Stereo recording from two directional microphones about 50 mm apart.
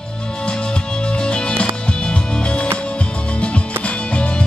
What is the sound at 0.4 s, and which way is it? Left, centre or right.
Music, centre.